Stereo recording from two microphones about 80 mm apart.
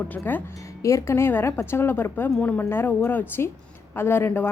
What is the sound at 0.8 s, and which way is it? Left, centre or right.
A woman's voice, left.